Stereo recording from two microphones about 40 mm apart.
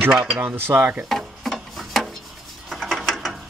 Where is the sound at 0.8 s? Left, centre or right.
Right.